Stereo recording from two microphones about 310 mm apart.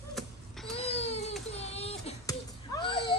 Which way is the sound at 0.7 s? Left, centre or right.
Centre.